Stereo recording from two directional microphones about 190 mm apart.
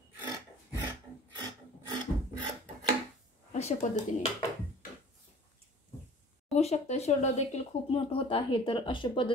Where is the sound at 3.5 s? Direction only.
35° left (ahead or behind).